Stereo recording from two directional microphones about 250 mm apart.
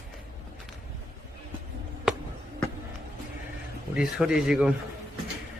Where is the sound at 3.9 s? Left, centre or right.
Centre.